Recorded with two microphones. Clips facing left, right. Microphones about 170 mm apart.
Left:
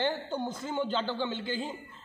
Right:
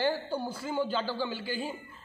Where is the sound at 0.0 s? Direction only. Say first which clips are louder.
Right 1 dB; 10° right (ahead or behind).